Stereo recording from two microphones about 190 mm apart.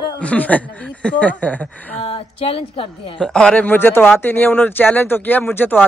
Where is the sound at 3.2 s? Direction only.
5° left (ahead or behind).